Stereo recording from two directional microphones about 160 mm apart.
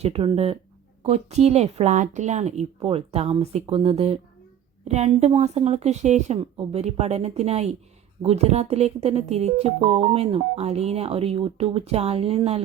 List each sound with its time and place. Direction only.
0.0 s speech: 35° right (ahead or behind)